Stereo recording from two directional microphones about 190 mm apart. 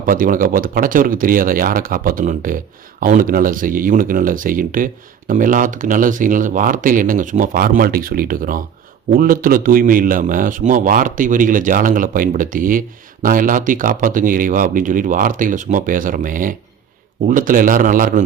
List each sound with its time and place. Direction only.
0.0 s a man's voice: 45° right (ahead or behind)